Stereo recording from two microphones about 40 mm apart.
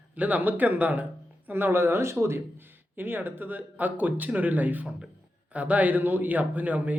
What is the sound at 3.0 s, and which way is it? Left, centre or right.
Speech, right.